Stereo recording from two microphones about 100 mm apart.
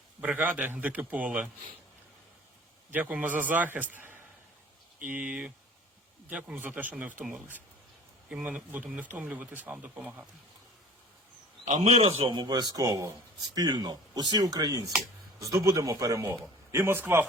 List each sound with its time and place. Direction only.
0.2 s speech: 15° right (ahead or behind)
2.9 s speech: 15° right (ahead or behind)
11.7 s a man's voice: 90° right
12.3 s speech: 45° right (ahead or behind); by 17.2 s 25° right (ahead or behind)